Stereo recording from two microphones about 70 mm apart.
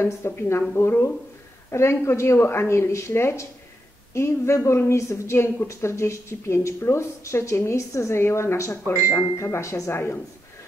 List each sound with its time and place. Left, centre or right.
0.0 s a woman's voice: left